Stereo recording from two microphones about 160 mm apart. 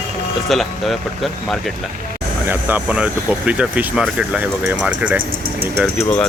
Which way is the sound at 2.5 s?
10° right (ahead or behind).